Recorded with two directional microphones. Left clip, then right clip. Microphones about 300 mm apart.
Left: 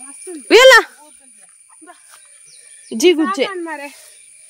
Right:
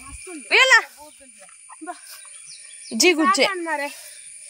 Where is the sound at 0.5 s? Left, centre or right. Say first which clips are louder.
Left 8 dB; centre.